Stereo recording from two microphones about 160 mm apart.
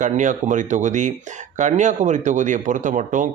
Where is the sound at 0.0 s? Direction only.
50° right (ahead or behind).